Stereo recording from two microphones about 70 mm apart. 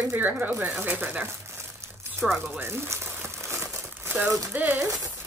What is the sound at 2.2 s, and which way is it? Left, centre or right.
Speech, centre.